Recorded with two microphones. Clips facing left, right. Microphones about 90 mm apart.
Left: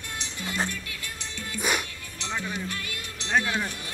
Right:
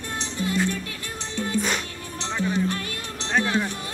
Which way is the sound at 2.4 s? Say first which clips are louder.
Right 12 dB; 35° right (ahead or behind).